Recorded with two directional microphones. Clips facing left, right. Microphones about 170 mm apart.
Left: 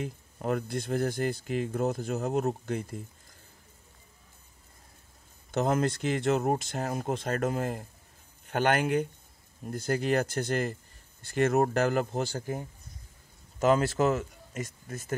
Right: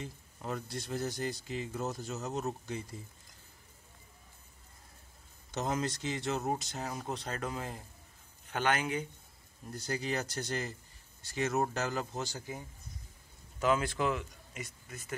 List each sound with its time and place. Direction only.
0.0 s speech: 60° left (ahead or behind)
5.5 s speech: 55° left (ahead or behind)
13.6 s speech: 40° left (ahead or behind)